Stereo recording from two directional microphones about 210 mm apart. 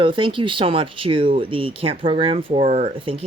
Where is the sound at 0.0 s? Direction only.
25° right (ahead or behind).